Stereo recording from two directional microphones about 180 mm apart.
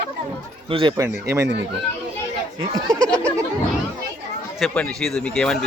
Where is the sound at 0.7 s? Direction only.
30° right (ahead or behind).